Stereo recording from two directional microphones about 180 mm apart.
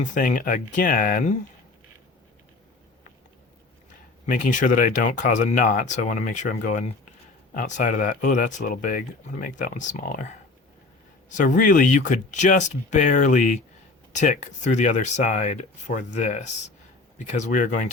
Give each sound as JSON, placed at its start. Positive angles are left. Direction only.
{"t": 0.0, "sound": "speech", "side_deg": 45}
{"t": 4.3, "sound": "speech", "side_deg": 45}
{"t": 11.3, "sound": "speech", "side_deg": 45}